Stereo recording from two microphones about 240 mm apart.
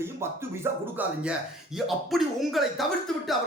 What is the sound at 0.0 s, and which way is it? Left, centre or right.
Speech, centre.